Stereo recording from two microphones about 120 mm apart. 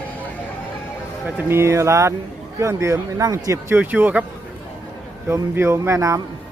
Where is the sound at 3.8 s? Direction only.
15° right (ahead or behind).